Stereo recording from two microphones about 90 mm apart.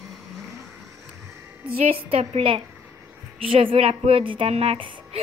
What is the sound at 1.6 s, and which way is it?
A woman's voice, 90° right.